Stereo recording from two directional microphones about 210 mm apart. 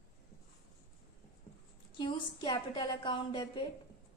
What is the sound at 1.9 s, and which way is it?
A woman's voice, 20° left (ahead or behind).